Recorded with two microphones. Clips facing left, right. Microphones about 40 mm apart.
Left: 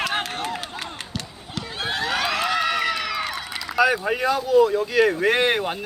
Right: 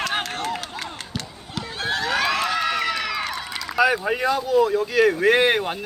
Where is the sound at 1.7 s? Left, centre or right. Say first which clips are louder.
Right 1 dB; left.